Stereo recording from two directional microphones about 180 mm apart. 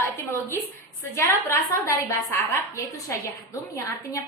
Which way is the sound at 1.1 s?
15° left (ahead or behind).